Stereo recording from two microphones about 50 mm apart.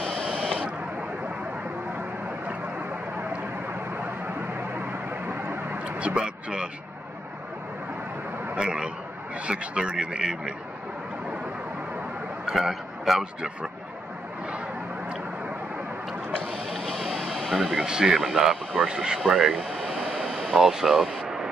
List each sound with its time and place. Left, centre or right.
0.0 s buzzer: left
5.9 s speech: right
8.5 s speech: centre
12.4 s a sound: centre
13.2 s speech: centre
16.7 s vehicle: centre
17.5 s speech: centre
17.8 s speech: centre
19.6 s air conditioning: centre
20.1 s vehicle: centre
20.5 s speech: centre